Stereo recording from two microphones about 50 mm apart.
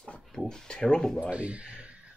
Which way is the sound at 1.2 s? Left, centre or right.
Right.